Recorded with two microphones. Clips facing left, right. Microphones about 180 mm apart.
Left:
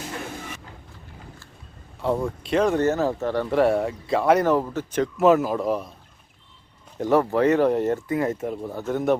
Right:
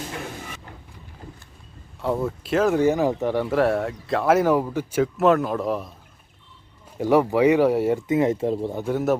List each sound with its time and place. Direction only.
2.0 s speech: centre (ahead or behind)
3.5 s speech: centre (ahead or behind)
7.0 s speech: 10° right (ahead or behind)
8.0 s speech: 20° right (ahead or behind)
8.7 s speech: 10° right (ahead or behind)